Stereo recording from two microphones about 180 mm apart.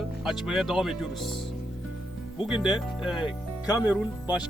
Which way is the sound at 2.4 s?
5° right (ahead or behind).